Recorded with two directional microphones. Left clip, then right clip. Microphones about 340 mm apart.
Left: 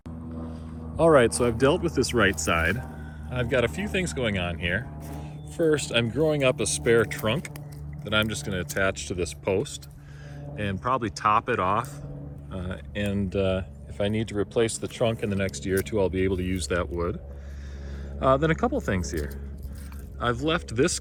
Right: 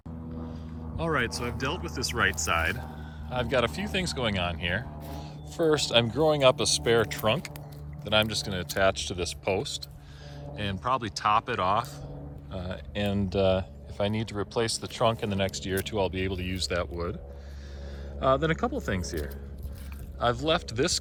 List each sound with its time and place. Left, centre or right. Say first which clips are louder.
0.5 s speech: left 8 dB; centre
15.1 s speech: left 1 dB; right
15.4 s speech: left 3 dB; centre
18.3 s speech: left 3 dB; centre
20.4 s speech: left 2 dB; centre